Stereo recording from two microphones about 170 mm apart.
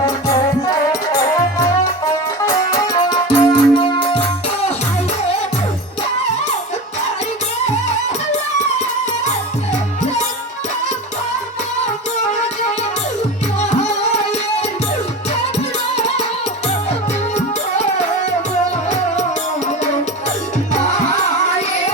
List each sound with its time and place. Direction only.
2.5 s music: 20° left (ahead or behind)